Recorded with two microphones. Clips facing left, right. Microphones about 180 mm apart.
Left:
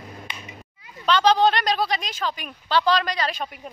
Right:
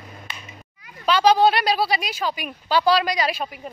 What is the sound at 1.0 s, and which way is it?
A woman's voice, 10° right (ahead or behind).